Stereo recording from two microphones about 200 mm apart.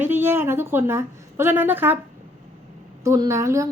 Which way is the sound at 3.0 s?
15° right (ahead or behind).